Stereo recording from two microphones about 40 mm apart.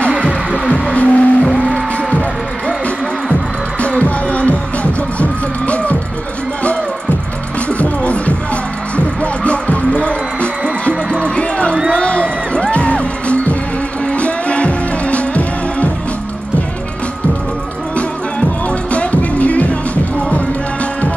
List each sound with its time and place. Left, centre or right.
0.2 s music: left
0.9 s music: left
3.8 s music: left
7.6 s music: left
18.7 s music: left